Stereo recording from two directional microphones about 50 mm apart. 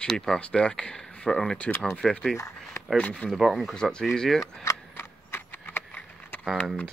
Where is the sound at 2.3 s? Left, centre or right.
Left.